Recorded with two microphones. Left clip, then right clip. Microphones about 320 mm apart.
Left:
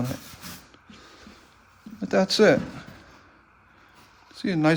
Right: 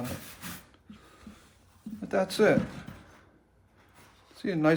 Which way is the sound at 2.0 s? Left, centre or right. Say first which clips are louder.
Left 6 dB; left.